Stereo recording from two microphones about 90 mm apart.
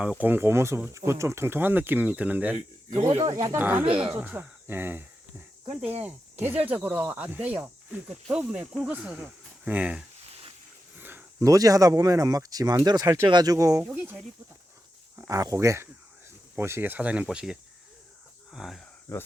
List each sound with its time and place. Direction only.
0.2 s speech: 20° right (ahead or behind)
3.0 s speech: 90° right
3.5 s speech: 25° right (ahead or behind)
11.0 s a sound: 25° right (ahead or behind)
11.4 s speech: 40° right (ahead or behind)
13.8 s speech: 20° right (ahead or behind)
15.3 s speech: 40° right (ahead or behind); by 18.8 s 5° right (ahead or behind)
19.1 s speech: 25° left (ahead or behind)